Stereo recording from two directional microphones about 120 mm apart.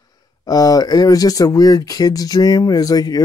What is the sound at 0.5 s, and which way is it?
Speech, 30° left (ahead or behind).